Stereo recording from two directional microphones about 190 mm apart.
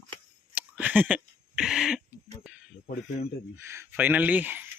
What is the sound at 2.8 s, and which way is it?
Speech, 55° left (ahead or behind).